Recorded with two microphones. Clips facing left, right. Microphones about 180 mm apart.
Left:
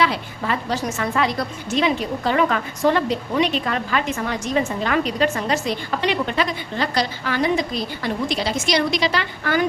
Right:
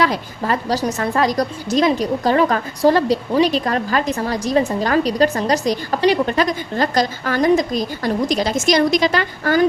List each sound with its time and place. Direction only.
0.0 s a woman's voice: 40° right (ahead or behind)